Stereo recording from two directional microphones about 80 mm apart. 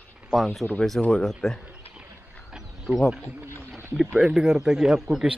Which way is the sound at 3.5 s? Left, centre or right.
Right.